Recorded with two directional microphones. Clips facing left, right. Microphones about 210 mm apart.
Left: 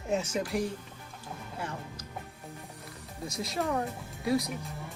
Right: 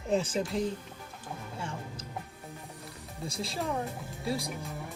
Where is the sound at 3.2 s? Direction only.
30° right (ahead or behind).